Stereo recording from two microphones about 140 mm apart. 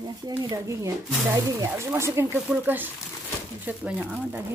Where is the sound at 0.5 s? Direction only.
20° right (ahead or behind).